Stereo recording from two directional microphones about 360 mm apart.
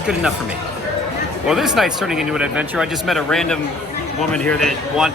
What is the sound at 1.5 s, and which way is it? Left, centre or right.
Speech, centre.